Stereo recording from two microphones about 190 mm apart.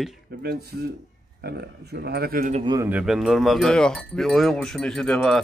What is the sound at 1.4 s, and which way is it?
Speech, 60° right (ahead or behind).